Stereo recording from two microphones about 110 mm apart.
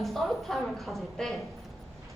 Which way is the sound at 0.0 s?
Centre (ahead or behind).